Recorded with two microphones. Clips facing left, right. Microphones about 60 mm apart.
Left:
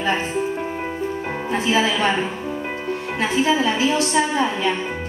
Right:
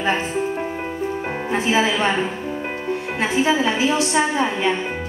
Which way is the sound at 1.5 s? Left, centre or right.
Right.